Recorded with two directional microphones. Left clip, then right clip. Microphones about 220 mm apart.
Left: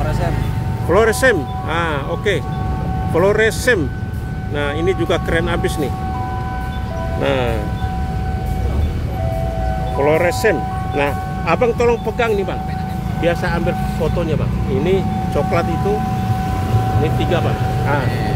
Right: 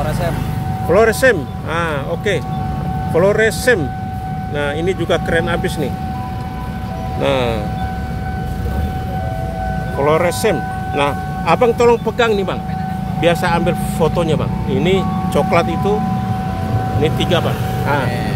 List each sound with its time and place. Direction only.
0.8 s speech: 5° right (ahead or behind)
7.2 s speech: 10° right (ahead or behind)
10.0 s speech: 10° right (ahead or behind)
13.2 s speech: 30° right (ahead or behind)
17.0 s speech: 25° right (ahead or behind)